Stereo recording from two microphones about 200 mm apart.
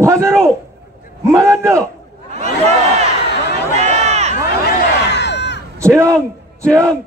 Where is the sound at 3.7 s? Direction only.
35° right (ahead or behind).